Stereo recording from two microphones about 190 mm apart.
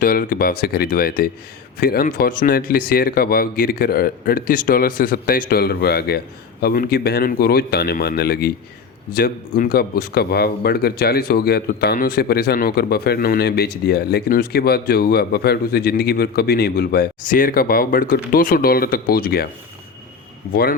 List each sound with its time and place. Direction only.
0.0 s a man's voice: 50° left (ahead or behind)